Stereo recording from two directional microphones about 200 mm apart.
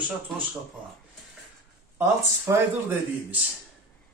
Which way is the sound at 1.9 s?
10° right (ahead or behind).